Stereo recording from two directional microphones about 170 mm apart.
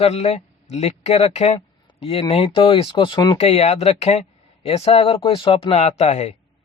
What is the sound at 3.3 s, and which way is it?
Speech, 40° left (ahead or behind).